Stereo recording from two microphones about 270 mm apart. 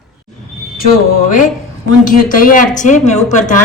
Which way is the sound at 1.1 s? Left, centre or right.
Left.